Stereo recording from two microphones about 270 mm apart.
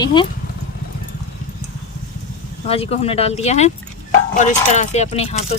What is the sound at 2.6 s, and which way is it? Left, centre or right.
Speech, left.